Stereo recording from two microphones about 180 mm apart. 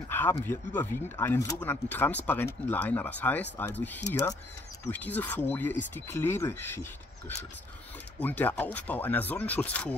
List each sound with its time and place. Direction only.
0.1 s speech: 10° left (ahead or behind)